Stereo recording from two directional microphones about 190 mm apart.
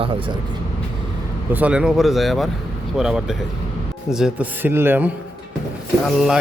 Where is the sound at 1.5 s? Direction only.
5° right (ahead or behind).